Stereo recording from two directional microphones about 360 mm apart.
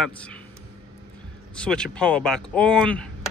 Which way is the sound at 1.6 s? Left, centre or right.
Centre.